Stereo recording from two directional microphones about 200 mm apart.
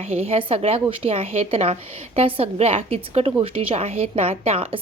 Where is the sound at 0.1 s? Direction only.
30° right (ahead or behind).